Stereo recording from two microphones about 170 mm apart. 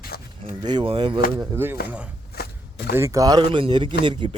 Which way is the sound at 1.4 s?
15° right (ahead or behind).